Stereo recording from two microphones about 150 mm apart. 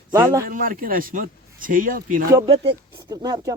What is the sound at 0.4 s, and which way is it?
A man's voice, 65° right (ahead or behind).